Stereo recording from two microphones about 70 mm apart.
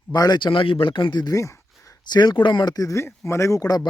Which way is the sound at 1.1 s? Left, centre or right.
Left.